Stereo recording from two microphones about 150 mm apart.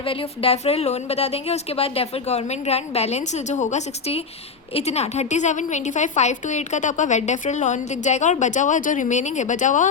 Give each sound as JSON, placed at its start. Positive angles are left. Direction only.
{"t": 0.0, "sound": "a woman's voice", "side_deg": 35}